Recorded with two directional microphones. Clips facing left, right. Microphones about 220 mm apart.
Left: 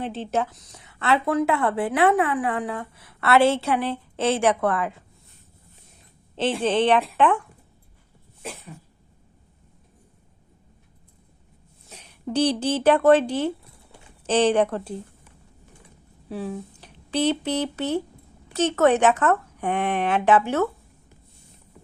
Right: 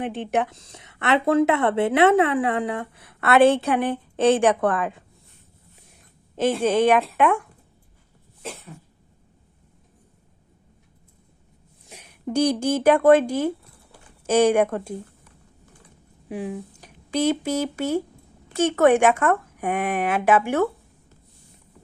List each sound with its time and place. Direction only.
0.1 s speech: 15° right (ahead or behind)
0.5 s a woman's voice: 25° right (ahead or behind)
6.3 s speech: 10° right (ahead or behind)
11.9 s speech: 10° right (ahead or behind)
16.3 s speech: 15° right (ahead or behind)